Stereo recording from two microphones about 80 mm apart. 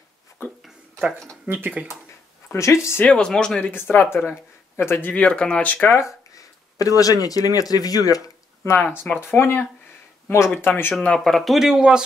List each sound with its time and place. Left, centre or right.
1.5 s speech: centre
2.5 s speech: left
3.1 s speech: centre
3.7 s speech: left
5.1 s speech: centre
5.9 s a sound: left
7.0 s speech: left
8.6 s speech: left
11.0 s speech: centre